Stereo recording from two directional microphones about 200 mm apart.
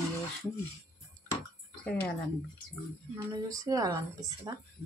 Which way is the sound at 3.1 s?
15° right (ahead or behind).